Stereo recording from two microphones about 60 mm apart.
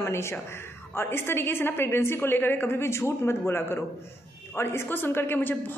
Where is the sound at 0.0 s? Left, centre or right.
Left.